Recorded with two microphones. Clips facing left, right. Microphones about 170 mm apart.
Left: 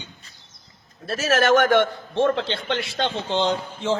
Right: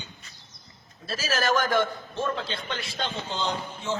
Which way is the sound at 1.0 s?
70° left (ahead or behind).